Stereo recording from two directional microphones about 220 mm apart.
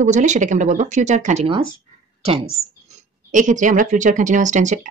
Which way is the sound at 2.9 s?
35° right (ahead or behind).